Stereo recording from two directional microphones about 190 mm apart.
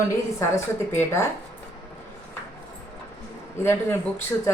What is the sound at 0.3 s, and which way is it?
Speech, 15° left (ahead or behind).